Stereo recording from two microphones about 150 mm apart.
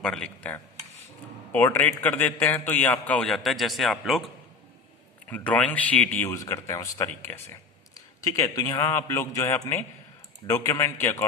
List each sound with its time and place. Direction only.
0.0 s a man's voice: 5° left (ahead or behind)
5.3 s speech: 10° left (ahead or behind)